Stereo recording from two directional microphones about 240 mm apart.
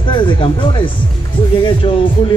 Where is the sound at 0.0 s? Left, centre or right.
Left.